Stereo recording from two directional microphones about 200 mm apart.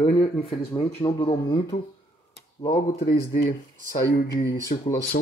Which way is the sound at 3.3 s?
55° left (ahead or behind).